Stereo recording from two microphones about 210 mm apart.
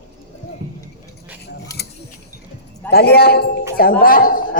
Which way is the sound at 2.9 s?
50° left (ahead or behind).